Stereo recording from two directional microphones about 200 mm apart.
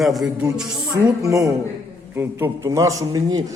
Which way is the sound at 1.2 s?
15° right (ahead or behind).